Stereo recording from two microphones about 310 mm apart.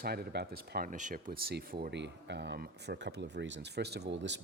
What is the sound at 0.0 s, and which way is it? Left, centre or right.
Speech, right.